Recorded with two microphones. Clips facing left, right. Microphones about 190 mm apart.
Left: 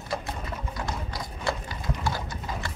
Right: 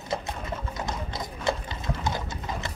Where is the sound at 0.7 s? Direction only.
20° right (ahead or behind).